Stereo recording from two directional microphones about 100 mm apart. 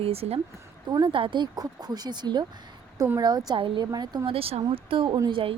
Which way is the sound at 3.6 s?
60° right (ahead or behind).